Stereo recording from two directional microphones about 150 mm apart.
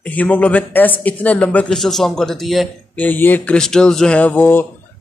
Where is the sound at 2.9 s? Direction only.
10° left (ahead or behind).